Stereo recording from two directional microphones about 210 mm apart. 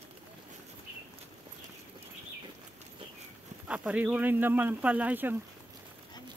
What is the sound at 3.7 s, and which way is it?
Speech, 5° right (ahead or behind).